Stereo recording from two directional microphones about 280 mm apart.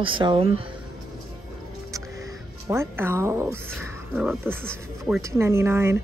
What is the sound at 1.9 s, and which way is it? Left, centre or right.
Music, centre.